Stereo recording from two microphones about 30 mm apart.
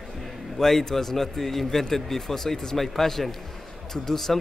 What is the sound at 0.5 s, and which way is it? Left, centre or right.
Speech, centre.